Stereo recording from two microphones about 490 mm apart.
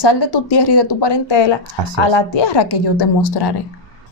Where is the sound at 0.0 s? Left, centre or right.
Left.